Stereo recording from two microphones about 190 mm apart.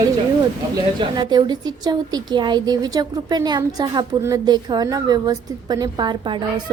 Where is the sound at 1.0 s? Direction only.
25° right (ahead or behind).